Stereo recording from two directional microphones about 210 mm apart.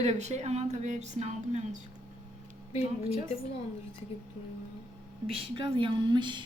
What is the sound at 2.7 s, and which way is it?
Speech, 30° left (ahead or behind).